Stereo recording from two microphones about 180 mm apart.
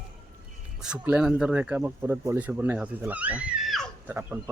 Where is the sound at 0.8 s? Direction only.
5° right (ahead or behind).